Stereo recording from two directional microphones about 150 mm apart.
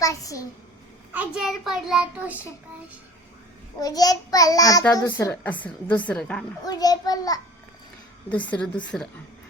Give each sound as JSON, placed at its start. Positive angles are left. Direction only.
{"t": 0.0, "sound": "a child's voice", "side_deg": 20}
{"t": 1.1, "sound": "a child's voice", "side_deg": -5}
{"t": 3.8, "sound": "a child's voice", "side_deg": 25}
{"t": 6.7, "sound": "a child's voice", "side_deg": 25}
{"t": 8.3, "sound": "speech", "side_deg": 10}